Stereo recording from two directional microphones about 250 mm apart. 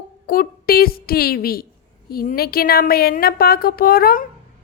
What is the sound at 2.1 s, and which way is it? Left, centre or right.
A woman's voice, left.